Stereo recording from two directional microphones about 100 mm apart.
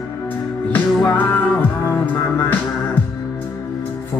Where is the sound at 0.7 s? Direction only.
20° left (ahead or behind).